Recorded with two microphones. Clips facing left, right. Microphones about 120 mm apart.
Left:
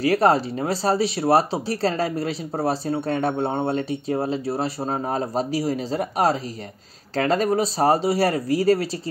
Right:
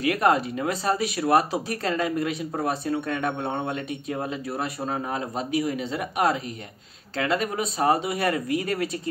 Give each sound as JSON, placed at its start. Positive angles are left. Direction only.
{"t": 0.0, "sound": "speech", "side_deg": 35}